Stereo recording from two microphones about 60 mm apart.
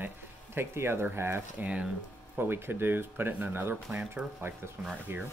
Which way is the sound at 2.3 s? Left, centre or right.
Right.